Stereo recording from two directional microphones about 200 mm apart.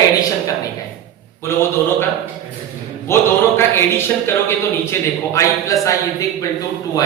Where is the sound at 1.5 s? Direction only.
10° left (ahead or behind).